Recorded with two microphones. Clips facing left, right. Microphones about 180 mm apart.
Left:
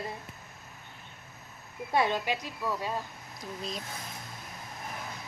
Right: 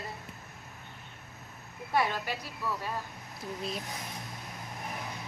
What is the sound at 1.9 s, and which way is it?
Speech, 20° left (ahead or behind).